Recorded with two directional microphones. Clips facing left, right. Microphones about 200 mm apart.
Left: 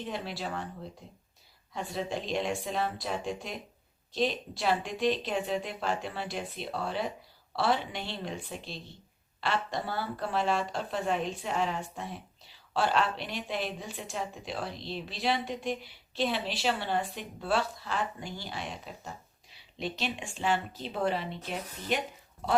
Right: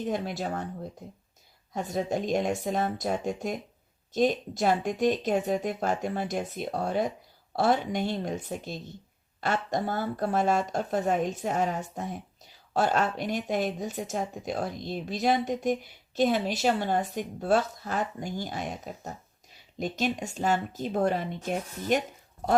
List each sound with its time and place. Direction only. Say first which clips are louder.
0.0 s speech: right 6 dB; 45° right (ahead or behind)
1.7 s speech: right 5 dB; 45° right (ahead or behind)